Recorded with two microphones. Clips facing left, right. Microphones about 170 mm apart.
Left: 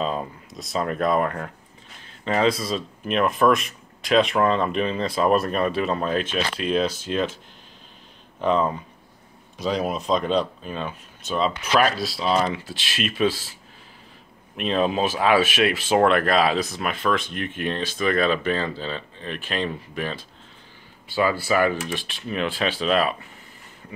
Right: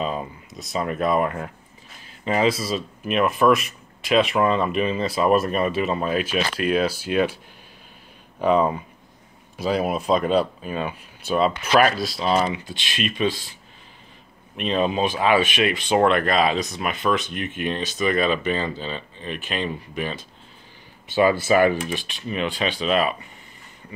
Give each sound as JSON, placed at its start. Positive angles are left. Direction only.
{"t": 0.0, "sound": "speech", "side_deg": -5}
{"t": 8.4, "sound": "speech", "side_deg": -10}
{"t": 14.6, "sound": "speech", "side_deg": 0}
{"t": 21.1, "sound": "speech", "side_deg": -20}
{"t": 21.8, "sound": "speech", "side_deg": 0}